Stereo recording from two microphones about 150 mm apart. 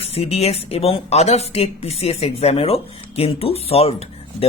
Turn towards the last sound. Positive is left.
turn(degrees=40)  # may be behind; listen again after turning